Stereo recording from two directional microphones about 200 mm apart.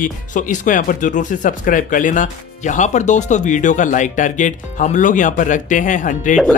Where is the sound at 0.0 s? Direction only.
40° left (ahead or behind).